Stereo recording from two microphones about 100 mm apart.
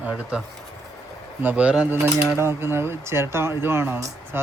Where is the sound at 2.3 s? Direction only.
25° right (ahead or behind).